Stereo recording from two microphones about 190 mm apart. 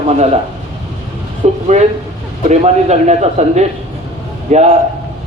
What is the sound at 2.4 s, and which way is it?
A man's voice, 35° right (ahead or behind).